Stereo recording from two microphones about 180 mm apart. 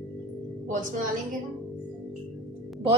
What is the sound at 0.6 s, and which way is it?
Speech, 45° right (ahead or behind).